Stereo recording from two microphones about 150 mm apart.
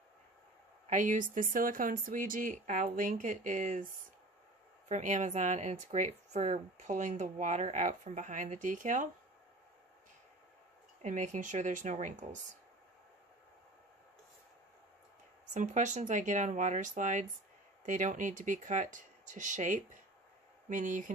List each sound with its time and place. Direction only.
0.8 s speech: 55° right (ahead or behind)
4.8 s speech: 50° right (ahead or behind)
11.0 s speech: 55° right (ahead or behind)
15.5 s speech: 55° right (ahead or behind)